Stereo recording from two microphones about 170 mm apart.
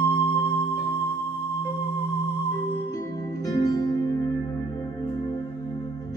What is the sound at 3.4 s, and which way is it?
Music, 20° left (ahead or behind).